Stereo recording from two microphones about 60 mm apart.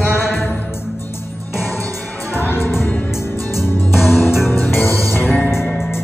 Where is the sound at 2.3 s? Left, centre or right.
Left.